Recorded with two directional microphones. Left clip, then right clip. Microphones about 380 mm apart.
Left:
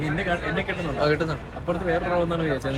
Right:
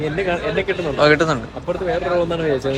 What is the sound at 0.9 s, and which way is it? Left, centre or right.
Speech, right.